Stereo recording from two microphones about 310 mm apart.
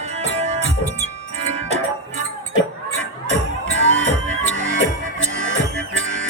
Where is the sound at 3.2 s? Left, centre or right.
Right.